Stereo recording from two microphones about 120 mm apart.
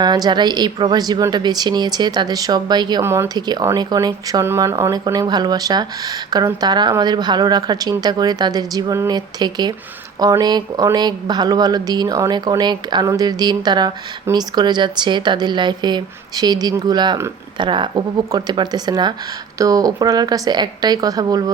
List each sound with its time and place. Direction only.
0.0 s speech: 35° right (ahead or behind)
3.0 s speech: 20° right (ahead or behind)
3.3 s speech: 35° right (ahead or behind)